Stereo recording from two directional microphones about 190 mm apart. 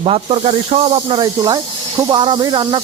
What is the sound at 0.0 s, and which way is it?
Speech, 30° right (ahead or behind).